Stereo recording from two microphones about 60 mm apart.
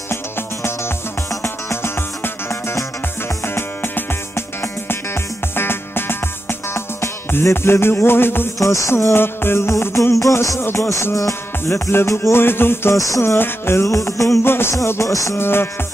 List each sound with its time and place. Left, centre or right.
0.1 s music: left
7.5 s music: left
8.5 s music: left
10.6 s music: left
11.1 s music: left
12.9 s music: left
13.4 s music: left
13.8 s music: left
14.4 s music: left
14.9 s music: left
15.3 s music: left